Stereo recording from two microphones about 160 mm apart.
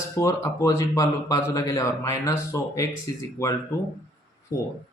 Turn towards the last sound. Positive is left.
turn(degrees=20)  # may be behind; listen again after turning